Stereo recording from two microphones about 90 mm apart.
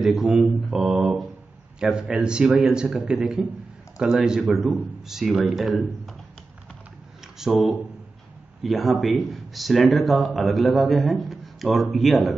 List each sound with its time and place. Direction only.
0.0 s a man's voice: centre (ahead or behind)
7.3 s speech: 5° right (ahead or behind)